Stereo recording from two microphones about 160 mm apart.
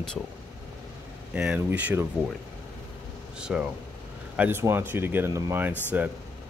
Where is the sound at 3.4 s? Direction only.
5° right (ahead or behind).